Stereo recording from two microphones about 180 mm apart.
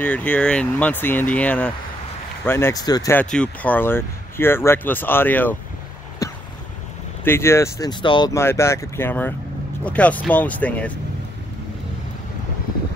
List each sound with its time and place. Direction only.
0.0 s speech: 10° left (ahead or behind)
3.2 s speech: 5° left (ahead or behind)
7.2 s speech: 15° left (ahead or behind)